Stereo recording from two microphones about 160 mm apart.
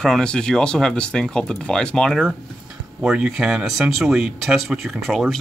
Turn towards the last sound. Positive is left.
turn(degrees=0)  # may be behind; listen again after turning